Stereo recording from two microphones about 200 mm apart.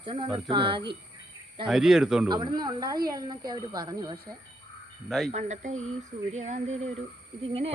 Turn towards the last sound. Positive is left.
turn(degrees=-30)  # may be behind; listen again after turning